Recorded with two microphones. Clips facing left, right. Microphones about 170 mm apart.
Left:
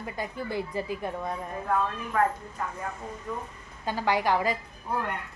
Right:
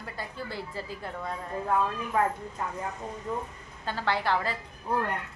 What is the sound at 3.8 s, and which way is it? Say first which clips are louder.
Speech: left 3 dB; 15° left (ahead or behind).